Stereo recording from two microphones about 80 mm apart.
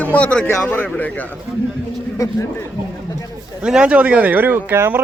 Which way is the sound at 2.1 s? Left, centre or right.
Left.